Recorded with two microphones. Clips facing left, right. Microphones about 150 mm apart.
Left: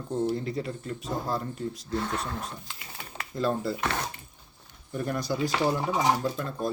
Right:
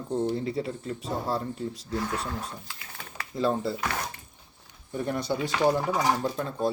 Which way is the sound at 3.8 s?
25° left (ahead or behind).